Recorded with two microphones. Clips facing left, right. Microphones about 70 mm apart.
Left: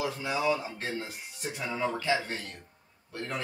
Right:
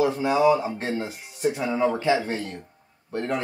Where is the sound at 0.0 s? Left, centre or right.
Right.